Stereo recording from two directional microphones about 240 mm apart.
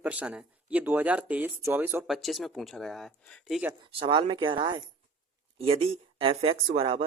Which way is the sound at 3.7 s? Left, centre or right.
Right.